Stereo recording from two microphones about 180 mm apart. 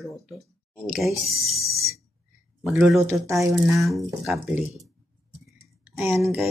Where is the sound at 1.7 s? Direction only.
60° right (ahead or behind).